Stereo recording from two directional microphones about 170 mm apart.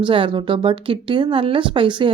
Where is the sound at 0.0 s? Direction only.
30° right (ahead or behind).